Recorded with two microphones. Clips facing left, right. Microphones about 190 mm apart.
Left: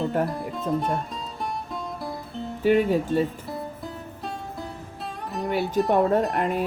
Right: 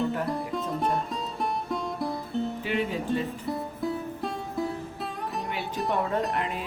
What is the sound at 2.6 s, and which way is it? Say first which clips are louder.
Speech: left 14 dB; 45° left (ahead or behind).